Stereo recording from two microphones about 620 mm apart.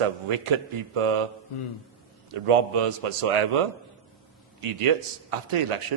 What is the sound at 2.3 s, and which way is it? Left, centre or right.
A man's voice, right.